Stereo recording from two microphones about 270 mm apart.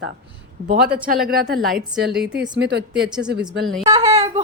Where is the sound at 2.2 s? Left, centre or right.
Right.